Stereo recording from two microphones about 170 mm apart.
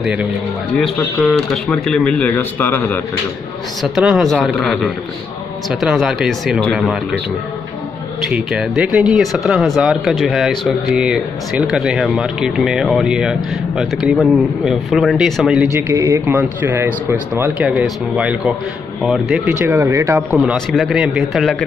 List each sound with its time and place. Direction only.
0.0 s speech: 5° right (ahead or behind); by 3.0 s 15° left (ahead or behind)
3.8 s speech: centre (ahead or behind)
8.2 s speech: centre (ahead or behind)
15.7 s speech: 15° right (ahead or behind)
19.6 s speech: 15° right (ahead or behind)
20.2 s speech: centre (ahead or behind)